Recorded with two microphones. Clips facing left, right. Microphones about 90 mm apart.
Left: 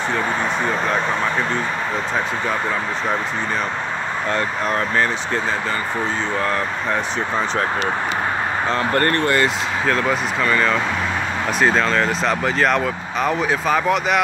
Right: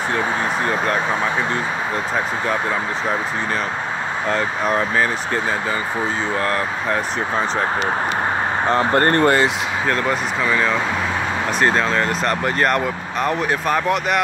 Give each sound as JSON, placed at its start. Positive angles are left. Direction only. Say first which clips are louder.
{"t": 4.3, "sound": "speech", "louder": "right 2 dB", "side_deg": 0}
{"t": 6.4, "sound": "speech", "louder": "right 1 dB", "side_deg": 0}
{"t": 8.6, "sound": "speech", "louder": "right 3 dB", "side_deg": -25}
{"t": 9.1, "sound": "speech", "louder": "right 3 dB", "side_deg": -35}
{"t": 9.8, "sound": "speech", "louder": "left 1 dB", "side_deg": -5}